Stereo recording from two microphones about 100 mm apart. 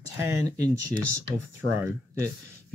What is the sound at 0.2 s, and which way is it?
Speech, 30° right (ahead or behind).